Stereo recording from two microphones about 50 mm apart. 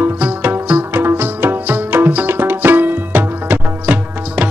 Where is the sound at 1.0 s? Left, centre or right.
Right.